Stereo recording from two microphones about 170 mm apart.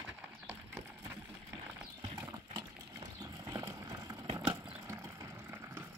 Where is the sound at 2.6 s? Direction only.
25° right (ahead or behind).